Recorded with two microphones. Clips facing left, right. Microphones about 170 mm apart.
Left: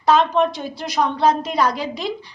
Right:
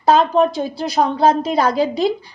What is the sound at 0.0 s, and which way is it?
A woman's voice, 35° right (ahead or behind).